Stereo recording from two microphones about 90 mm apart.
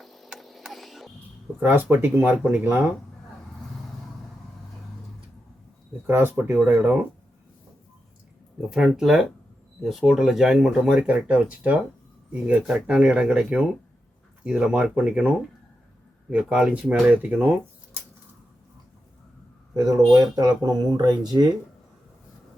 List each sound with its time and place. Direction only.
0.0 s a sound: centre (ahead or behind)
1.5 s speech: 25° right (ahead or behind)
6.1 s speech: 25° right (ahead or behind)
8.7 s speech: 5° right (ahead or behind)
16.3 s speech: 10° right (ahead or behind)
19.7 s speech: 40° right (ahead or behind)